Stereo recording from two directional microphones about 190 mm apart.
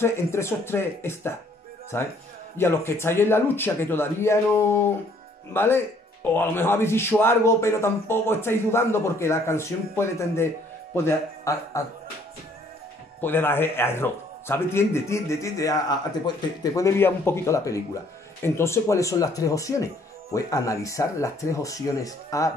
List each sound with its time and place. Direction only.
0.0 s a man's voice: 15° left (ahead or behind)
13.2 s a man's voice: 10° left (ahead or behind)